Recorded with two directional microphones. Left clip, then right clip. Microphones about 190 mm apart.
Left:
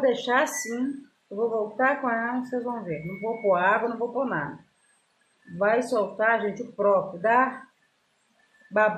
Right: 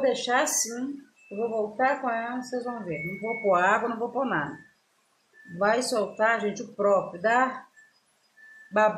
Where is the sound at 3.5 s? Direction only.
5° left (ahead or behind).